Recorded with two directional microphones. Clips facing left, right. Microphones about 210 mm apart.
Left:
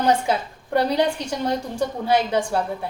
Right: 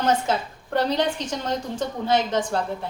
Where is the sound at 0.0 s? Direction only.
10° left (ahead or behind).